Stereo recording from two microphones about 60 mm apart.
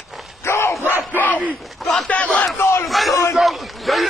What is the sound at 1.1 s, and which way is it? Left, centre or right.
Speech, left.